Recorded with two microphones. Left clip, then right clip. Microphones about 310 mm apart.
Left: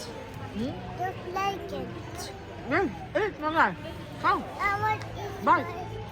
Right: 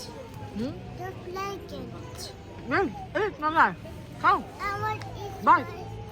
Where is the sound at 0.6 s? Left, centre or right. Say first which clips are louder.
Left 4 dB; centre.